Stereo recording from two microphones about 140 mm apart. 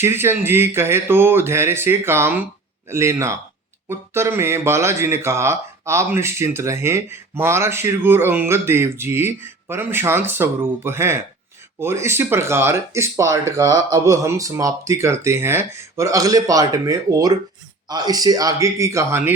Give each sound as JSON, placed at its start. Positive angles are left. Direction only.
{"t": 0.0, "sound": "speech", "side_deg": -15}